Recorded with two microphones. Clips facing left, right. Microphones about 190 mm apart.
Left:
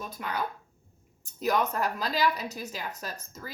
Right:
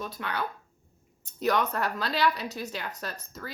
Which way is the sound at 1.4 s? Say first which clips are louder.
Even; 10° left (ahead or behind).